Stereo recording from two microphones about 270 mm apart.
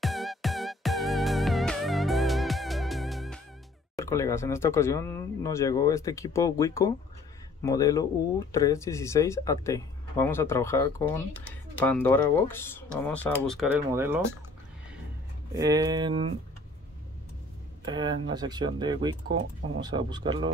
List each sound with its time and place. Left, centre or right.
0.0 s music: centre
3.9 s speech: centre
13.9 s speech: centre
15.5 s speech: centre
17.8 s speech: centre